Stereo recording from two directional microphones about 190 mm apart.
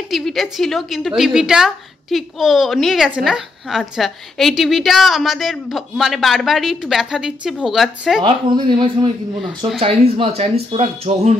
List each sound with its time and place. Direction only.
0.1 s a woman's voice: centre (ahead or behind)
8.2 s speech: 25° right (ahead or behind)